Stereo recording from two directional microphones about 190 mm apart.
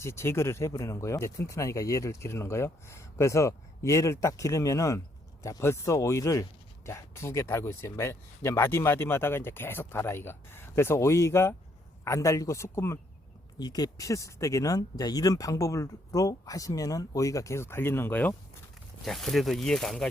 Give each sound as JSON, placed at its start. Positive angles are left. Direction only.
{"t": 0.0, "sound": "speech", "side_deg": 15}